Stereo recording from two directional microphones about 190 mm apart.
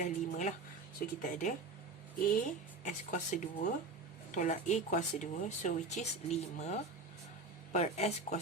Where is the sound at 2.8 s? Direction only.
40° left (ahead or behind).